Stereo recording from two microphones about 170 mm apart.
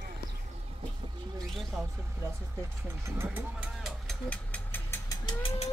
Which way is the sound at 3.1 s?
15° right (ahead or behind).